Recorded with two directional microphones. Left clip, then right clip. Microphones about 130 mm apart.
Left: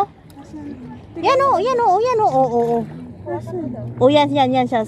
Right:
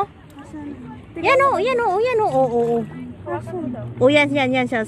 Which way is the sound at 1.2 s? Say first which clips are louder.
Left 1 dB; 25° left (ahead or behind).